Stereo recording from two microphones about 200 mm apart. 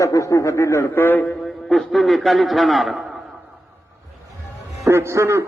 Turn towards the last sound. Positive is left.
turn(degrees=-15)  # may be behind; listen again after turning